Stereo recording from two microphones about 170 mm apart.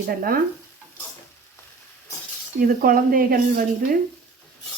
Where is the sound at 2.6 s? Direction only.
55° right (ahead or behind).